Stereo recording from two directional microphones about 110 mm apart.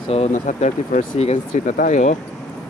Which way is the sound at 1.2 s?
80° left.